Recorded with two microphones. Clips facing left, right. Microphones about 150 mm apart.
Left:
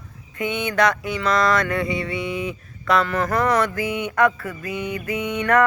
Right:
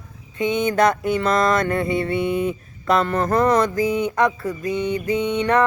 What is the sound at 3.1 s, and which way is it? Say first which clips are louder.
Speech: right 3 dB; 25° right (ahead or behind).